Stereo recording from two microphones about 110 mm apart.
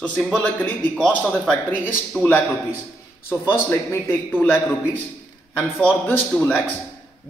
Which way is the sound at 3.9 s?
20° left (ahead or behind).